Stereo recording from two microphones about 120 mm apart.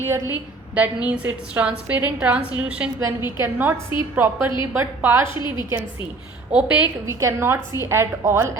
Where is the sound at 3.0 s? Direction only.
20° right (ahead or behind).